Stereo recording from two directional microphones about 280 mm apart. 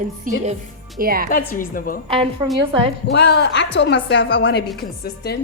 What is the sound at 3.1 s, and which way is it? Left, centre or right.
A woman's voice, left.